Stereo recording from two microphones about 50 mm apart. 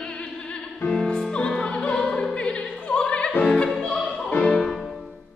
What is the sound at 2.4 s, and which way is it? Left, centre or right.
Opera, left.